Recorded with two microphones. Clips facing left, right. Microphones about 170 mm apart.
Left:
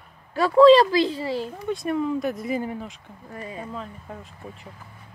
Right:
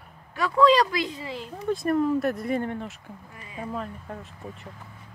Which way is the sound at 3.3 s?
40° left (ahead or behind).